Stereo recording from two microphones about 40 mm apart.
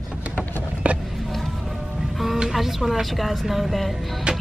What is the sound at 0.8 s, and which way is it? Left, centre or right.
Vehicle, right.